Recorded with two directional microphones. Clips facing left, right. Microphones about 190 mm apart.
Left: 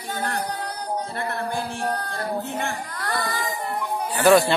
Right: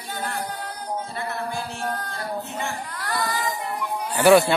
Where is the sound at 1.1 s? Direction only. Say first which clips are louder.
Left 2 dB; 60° left (ahead or behind).